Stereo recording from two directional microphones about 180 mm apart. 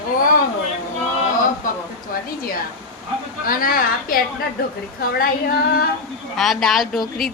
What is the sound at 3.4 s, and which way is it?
Speech, 55° left (ahead or behind).